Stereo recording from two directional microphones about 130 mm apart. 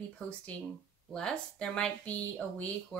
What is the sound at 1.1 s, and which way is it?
A woman's voice, 5° left (ahead or behind).